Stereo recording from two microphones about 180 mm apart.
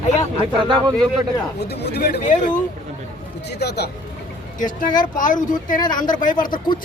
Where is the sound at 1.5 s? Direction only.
65° left (ahead or behind).